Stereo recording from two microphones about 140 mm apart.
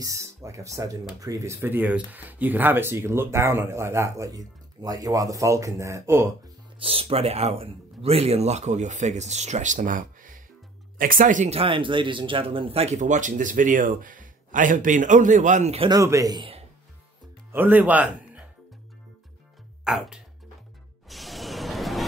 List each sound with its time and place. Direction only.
0.0 s speech: 20° right (ahead or behind)
6.8 s speech: 45° right (ahead or behind); by 11.5 s 65° right (ahead or behind)
11.5 s speech: 40° right (ahead or behind)
15.9 s speech: 25° right (ahead or behind)
17.5 s speech: 15° right (ahead or behind)
19.8 s speech: 5° right (ahead or behind)
21.1 s music: centre (ahead or behind)